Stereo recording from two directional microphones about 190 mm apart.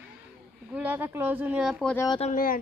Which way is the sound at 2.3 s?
50° left (ahead or behind).